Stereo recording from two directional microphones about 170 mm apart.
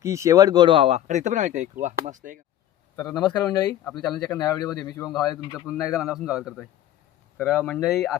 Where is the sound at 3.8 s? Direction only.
Centre (ahead or behind).